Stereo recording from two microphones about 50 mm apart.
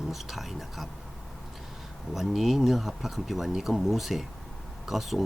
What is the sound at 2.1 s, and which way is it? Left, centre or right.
Speech, centre.